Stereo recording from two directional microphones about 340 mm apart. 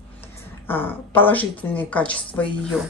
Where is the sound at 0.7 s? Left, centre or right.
Centre.